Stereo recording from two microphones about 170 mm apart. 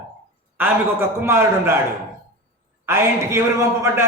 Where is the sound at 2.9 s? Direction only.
15° right (ahead or behind).